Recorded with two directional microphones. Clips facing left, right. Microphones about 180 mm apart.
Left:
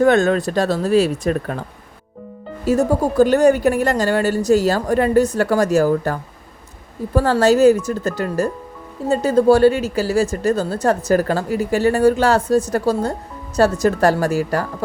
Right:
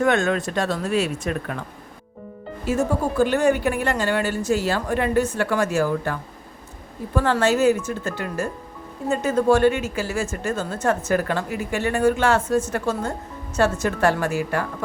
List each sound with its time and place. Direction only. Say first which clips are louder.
0.0 s speech: left 6 dB; 35° left (ahead or behind)
2.6 s speech: left 5 dB; 40° left (ahead or behind)